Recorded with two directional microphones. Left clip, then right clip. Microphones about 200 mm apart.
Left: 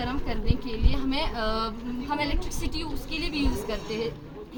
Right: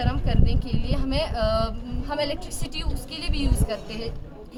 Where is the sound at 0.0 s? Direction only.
20° right (ahead or behind).